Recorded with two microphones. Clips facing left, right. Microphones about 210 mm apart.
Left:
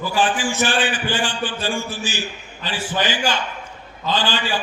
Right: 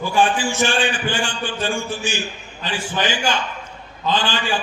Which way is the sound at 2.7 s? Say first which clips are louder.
Even; 15° right (ahead or behind).